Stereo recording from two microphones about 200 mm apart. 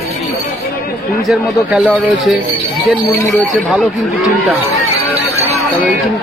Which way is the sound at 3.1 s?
15° left (ahead or behind).